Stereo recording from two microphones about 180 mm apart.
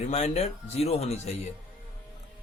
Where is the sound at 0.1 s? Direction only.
35° left (ahead or behind).